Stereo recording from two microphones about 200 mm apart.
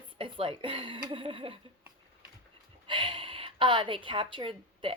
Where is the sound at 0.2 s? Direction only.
25° right (ahead or behind).